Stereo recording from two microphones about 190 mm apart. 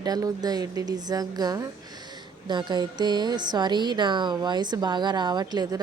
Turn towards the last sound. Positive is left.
turn(degrees=-20)  # may be behind; listen again after turning